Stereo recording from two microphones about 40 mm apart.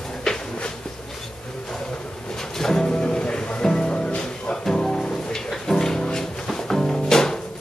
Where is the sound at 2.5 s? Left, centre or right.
Centre.